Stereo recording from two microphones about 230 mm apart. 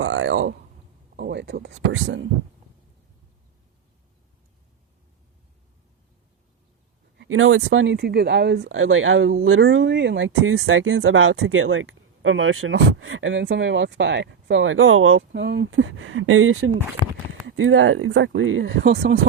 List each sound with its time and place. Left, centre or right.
0.0 s a sound: right
1.1 s speech: right
7.2 s speech: right
17.0 s speech: centre
17.4 s speech: right